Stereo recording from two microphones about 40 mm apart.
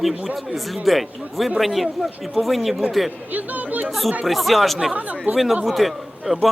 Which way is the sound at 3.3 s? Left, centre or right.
Right.